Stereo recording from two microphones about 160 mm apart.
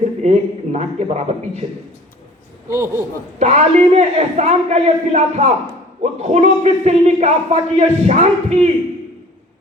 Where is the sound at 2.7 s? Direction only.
15° right (ahead or behind).